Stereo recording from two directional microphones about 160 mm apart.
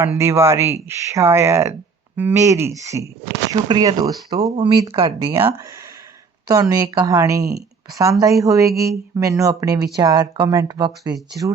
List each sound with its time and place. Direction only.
0.0 s speech: 15° right (ahead or behind)